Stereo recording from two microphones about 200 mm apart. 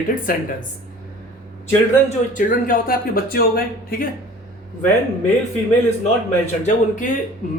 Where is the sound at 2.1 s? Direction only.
40° left (ahead or behind).